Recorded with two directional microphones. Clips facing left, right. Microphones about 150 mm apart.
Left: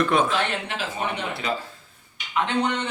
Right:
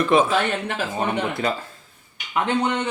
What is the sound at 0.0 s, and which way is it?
Speech, 5° right (ahead or behind).